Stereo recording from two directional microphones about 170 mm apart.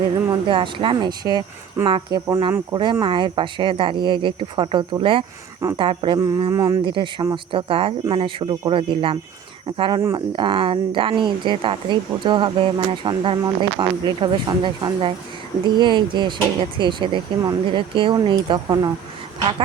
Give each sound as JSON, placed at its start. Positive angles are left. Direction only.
{"t": 0.4, "sound": "speech", "side_deg": -30}
{"t": 2.7, "sound": "speech", "side_deg": -30}
{"t": 6.9, "sound": "speech", "side_deg": -30}